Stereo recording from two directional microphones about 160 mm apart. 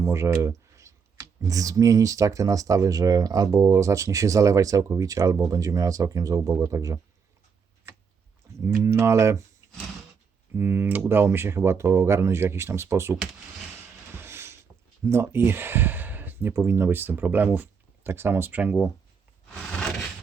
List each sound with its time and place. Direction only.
0.0 s speech: 15° right (ahead or behind)
8.6 s speech: 15° right (ahead or behind)
10.5 s speech: 15° right (ahead or behind)
14.2 s mechanisms: 15° right (ahead or behind)
15.0 s speech: 15° right (ahead or behind)
19.7 s a sound: 5° left (ahead or behind)